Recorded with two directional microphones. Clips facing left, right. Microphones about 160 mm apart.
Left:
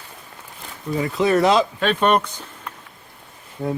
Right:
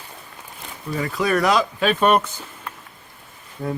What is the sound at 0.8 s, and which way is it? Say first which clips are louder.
Speech: left 3 dB; 20° left (ahead or behind).